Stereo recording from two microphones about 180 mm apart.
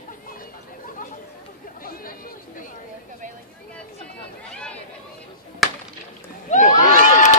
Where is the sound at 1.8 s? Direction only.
50° left (ahead or behind).